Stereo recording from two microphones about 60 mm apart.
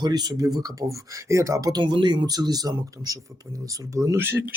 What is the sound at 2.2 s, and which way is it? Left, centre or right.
Speech, right.